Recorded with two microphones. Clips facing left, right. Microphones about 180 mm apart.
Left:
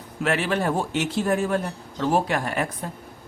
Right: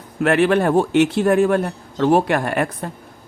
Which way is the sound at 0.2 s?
60° right (ahead or behind).